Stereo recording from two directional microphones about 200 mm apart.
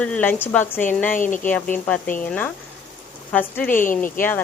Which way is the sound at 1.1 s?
40° left (ahead or behind).